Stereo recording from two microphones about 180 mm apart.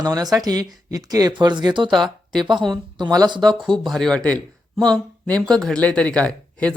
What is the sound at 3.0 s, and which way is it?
Speech, 20° right (ahead or behind).